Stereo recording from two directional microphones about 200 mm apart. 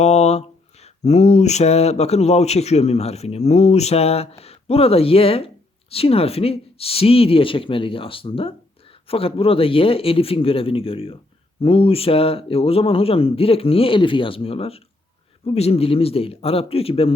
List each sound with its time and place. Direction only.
0.0 s speech: 35° left (ahead or behind)